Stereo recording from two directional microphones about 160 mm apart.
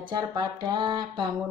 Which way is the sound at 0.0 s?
30° right (ahead or behind).